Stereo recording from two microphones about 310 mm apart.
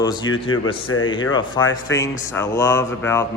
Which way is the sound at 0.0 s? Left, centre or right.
Centre.